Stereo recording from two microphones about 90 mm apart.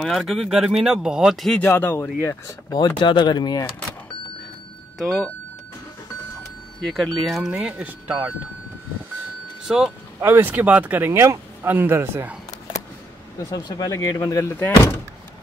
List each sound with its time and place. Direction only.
0.0 s speech: centre (ahead or behind)
1.6 s speech: 25° left (ahead or behind)
2.7 s speech: 55° left (ahead or behind)
4.9 s speech: 5° left (ahead or behind)
6.8 s speech: centre (ahead or behind)
7.7 s speech: 15° right (ahead or behind)
10.2 s speech: 20° right (ahead or behind)
13.4 s speech: 45° left (ahead or behind)